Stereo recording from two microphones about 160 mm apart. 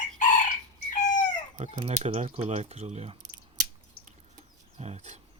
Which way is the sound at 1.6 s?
40° right (ahead or behind).